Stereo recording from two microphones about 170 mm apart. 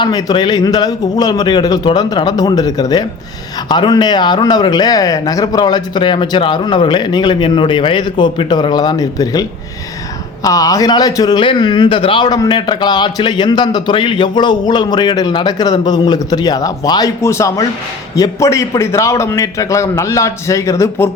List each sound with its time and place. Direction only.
0.0 s a man's voice: 20° left (ahead or behind)